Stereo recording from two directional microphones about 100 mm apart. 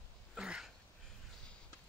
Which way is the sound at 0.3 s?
5° right (ahead or behind).